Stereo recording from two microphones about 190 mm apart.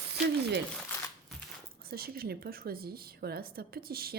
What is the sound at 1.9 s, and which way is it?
A woman's voice, 55° right (ahead or behind).